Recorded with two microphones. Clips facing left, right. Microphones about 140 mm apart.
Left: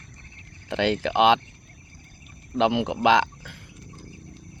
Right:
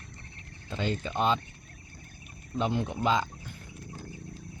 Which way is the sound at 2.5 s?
90° left.